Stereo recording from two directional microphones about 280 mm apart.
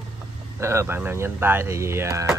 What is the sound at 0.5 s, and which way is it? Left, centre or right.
Speech, centre.